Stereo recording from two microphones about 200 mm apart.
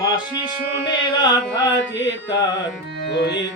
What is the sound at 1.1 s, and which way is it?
Carnatic music, 20° left (ahead or behind).